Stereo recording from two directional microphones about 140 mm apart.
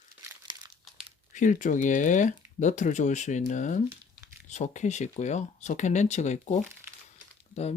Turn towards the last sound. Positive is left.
turn(degrees=50)  # may be behind; listen again after turning